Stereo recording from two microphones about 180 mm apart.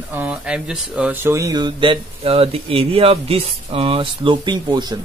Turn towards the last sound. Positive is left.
turn(degrees=-25)  # may be behind; listen again after turning